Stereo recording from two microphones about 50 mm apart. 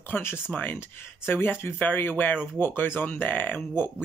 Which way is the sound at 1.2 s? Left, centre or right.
Left.